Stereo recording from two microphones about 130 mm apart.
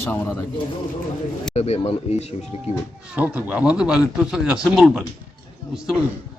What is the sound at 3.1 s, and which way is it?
Speech, 10° right (ahead or behind).